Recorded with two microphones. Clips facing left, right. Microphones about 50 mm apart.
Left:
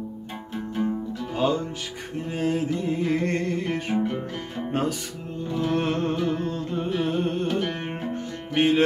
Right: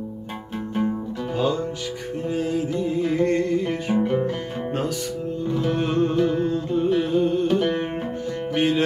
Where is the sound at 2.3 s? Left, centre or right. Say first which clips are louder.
Even; left.